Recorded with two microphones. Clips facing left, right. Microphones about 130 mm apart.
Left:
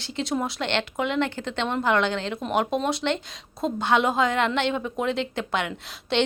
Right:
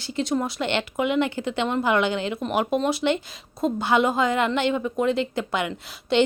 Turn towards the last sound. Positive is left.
turn(degrees=0)  # may be behind; listen again after turning